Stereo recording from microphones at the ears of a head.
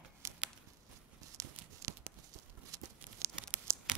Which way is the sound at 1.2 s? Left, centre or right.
Right.